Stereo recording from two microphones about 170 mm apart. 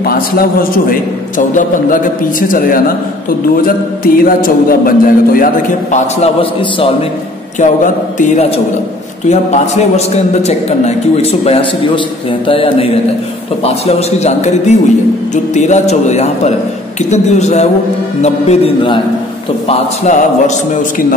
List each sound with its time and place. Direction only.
0.0 s a man's voice: 60° left (ahead or behind); by 6.3 s 45° left (ahead or behind)
7.5 s a man's voice: 45° left (ahead or behind)